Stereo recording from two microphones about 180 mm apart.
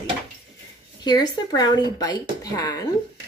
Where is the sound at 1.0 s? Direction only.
25° left (ahead or behind).